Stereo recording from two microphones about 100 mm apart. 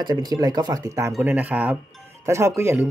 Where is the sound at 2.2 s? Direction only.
30° right (ahead or behind).